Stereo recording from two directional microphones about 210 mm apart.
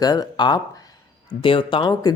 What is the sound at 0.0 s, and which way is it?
A man's voice, 20° left (ahead or behind).